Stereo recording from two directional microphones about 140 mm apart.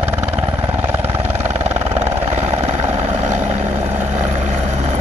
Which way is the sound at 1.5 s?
50° right (ahead or behind).